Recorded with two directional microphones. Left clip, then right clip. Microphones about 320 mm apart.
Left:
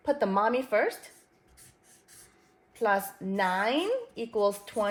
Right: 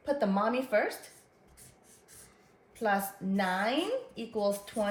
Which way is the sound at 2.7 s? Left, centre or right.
Left.